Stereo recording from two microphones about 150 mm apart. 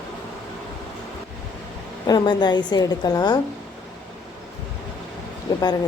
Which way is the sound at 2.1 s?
30° left (ahead or behind).